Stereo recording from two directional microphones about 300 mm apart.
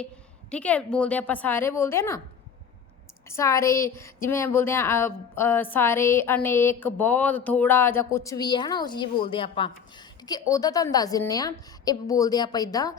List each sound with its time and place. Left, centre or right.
0.5 s a woman's voice: centre
3.2 s speech: centre